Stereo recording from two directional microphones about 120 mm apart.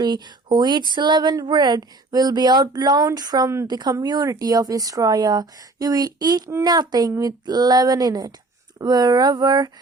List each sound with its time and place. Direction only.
0.0 s speech: 40° right (ahead or behind)